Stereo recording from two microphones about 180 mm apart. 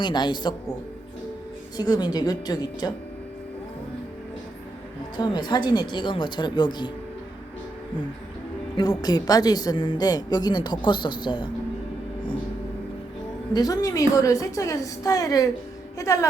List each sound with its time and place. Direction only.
0.0 s a woman's voice: 25° left (ahead or behind)
1.7 s a woman's voice: 25° left (ahead or behind)
5.1 s a woman's voice: 25° left (ahead or behind)
8.7 s a woman's voice: 20° left (ahead or behind)
13.5 s a woman's voice: 20° left (ahead or behind)
16.0 s music: 15° left (ahead or behind)